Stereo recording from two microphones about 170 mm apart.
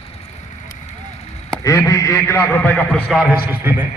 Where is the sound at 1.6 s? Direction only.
20° left (ahead or behind).